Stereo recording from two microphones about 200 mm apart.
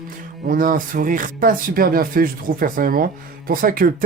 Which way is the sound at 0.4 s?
45° right (ahead or behind).